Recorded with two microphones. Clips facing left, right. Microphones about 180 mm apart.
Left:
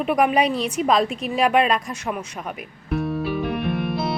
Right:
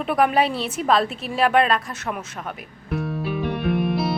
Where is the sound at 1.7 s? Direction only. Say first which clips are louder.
Left 1 dB; 15° left (ahead or behind).